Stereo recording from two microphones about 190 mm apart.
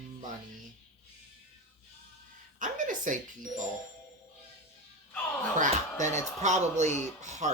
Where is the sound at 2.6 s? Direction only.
40° right (ahead or behind).